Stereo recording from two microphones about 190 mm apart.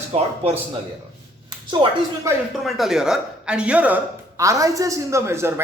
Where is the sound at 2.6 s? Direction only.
Centre (ahead or behind).